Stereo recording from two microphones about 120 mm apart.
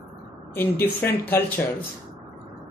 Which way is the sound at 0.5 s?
15° left (ahead or behind).